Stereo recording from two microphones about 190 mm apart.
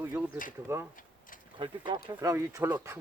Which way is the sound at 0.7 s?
15° right (ahead or behind).